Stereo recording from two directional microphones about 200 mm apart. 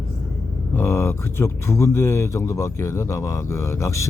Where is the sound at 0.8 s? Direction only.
10° left (ahead or behind).